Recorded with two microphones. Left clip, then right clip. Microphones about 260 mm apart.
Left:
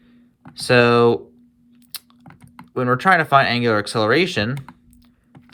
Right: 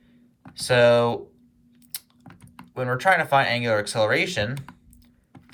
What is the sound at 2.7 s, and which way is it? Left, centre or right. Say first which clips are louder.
Speech: left 5 dB; centre.